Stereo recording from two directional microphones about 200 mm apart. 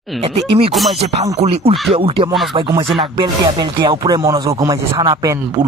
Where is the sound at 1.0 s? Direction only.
30° right (ahead or behind).